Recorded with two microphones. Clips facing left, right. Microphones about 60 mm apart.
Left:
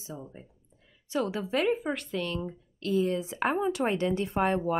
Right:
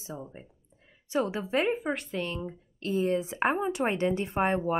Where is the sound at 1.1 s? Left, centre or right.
Right.